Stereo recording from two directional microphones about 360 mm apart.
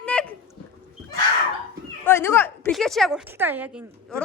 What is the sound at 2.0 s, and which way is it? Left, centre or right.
A woman's voice, centre.